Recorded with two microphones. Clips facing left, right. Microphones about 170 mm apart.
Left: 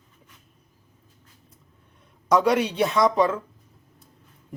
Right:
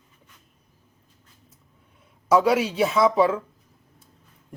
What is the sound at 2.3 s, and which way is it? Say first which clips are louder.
A man's voice: right 1 dB; 5° right (ahead or behind).